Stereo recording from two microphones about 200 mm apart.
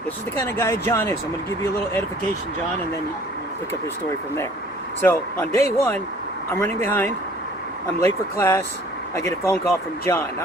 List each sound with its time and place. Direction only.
0.3 s speech: 10° left (ahead or behind)
4.9 s speech: 10° left (ahead or behind)